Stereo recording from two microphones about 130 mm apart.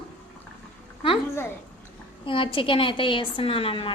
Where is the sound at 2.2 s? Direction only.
40° left (ahead or behind).